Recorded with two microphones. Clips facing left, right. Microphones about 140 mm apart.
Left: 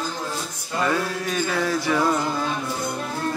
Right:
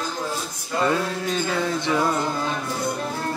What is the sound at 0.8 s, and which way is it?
Music, 25° right (ahead or behind).